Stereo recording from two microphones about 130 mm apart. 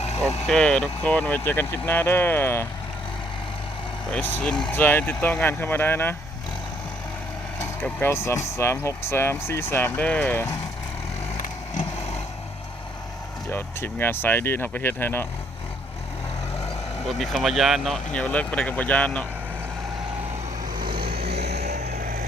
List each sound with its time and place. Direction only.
0.4 s speech: 5° left (ahead or behind)
4.1 s speech: 10° left (ahead or behind)
7.6 s speech: 15° left (ahead or behind)
11.4 s vehicle: 80° left
13.5 s speech: 15° left (ahead or behind)
17.1 s speech: centre (ahead or behind)